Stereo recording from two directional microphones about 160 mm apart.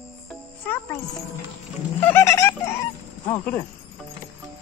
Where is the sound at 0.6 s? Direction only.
10° left (ahead or behind).